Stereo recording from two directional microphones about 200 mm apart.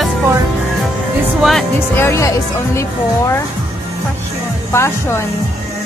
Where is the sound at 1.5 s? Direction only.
5° left (ahead or behind).